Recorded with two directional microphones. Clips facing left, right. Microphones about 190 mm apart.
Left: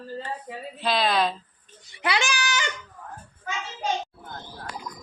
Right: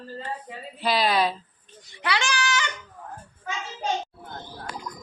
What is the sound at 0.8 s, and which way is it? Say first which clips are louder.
Speech: right 1 dB; 10° right (ahead or behind).